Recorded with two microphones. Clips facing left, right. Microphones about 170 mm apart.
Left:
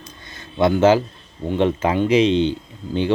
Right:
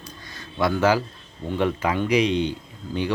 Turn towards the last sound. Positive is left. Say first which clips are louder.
# left 5 dB
turn(degrees=25)  # may be behind; listen again after turning